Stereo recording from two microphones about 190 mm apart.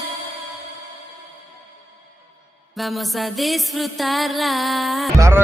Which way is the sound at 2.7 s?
Centre (ahead or behind).